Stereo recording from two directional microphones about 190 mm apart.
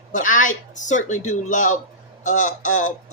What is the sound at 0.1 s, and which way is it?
A woman's voice, 45° left (ahead or behind).